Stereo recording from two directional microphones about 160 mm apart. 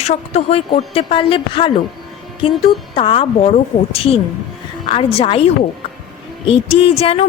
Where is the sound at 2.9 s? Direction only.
35° left (ahead or behind).